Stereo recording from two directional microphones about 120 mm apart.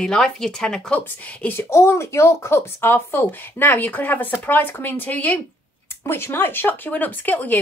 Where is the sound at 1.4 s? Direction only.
20° left (ahead or behind).